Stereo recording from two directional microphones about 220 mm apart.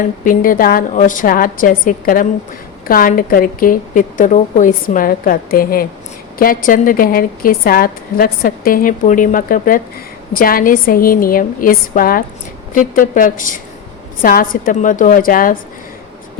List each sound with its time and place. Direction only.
0.3 s a woman's voice: 40° left (ahead or behind)